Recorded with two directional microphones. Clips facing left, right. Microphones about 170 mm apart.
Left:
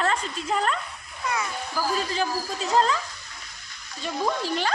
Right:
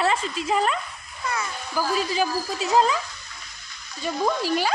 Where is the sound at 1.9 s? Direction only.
10° right (ahead or behind).